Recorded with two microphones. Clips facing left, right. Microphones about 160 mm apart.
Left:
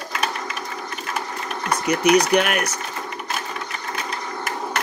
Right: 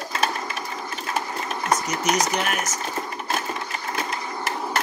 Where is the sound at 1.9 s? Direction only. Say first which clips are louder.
Left 7 dB; 60° left (ahead or behind).